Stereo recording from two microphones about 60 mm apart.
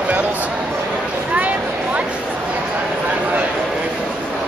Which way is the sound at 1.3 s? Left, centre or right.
Right.